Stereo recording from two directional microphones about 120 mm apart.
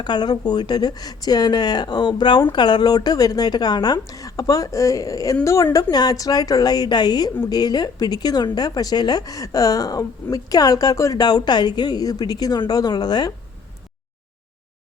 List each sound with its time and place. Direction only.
0.0 s speech: 35° left (ahead or behind)